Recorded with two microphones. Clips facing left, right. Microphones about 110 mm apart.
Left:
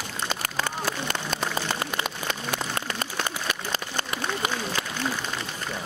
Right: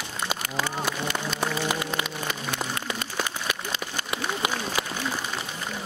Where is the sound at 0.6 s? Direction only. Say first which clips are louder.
Right 1 dB; 45° left (ahead or behind).